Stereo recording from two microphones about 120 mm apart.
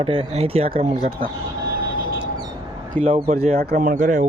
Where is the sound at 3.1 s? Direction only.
55° right (ahead or behind); by 4.3 s 90° right.